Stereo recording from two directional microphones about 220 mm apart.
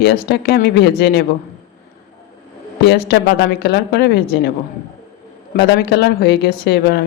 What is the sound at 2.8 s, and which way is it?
Speech, 50° left (ahead or behind).